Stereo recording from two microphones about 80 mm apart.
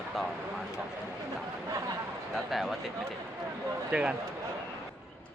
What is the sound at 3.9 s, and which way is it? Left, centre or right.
Speech, centre.